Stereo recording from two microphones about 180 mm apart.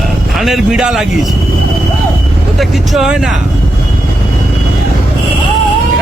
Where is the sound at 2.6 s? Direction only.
Centre (ahead or behind).